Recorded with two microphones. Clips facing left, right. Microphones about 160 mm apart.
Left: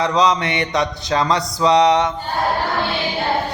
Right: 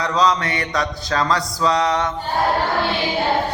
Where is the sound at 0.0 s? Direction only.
20° left (ahead or behind).